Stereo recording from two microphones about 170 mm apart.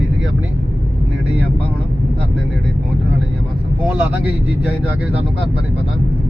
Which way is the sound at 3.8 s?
10° right (ahead or behind).